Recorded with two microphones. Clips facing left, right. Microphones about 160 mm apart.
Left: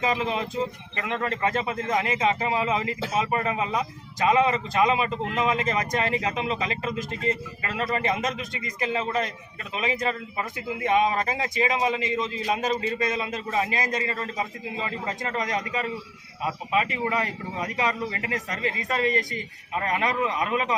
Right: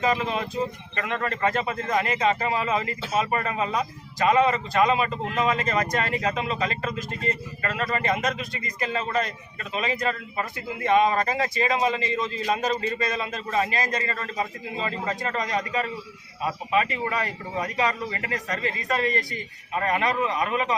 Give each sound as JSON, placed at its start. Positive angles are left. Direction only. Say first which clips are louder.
{"t": 0.0, "sound": "a man's voice", "louder": "right 1 dB", "side_deg": 20}